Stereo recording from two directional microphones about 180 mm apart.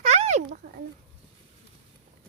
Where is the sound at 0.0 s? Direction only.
40° right (ahead or behind).